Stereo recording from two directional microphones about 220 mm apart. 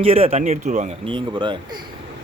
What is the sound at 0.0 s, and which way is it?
Speech, 25° right (ahead or behind).